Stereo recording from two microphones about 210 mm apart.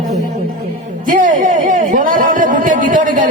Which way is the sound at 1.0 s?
40° right (ahead or behind).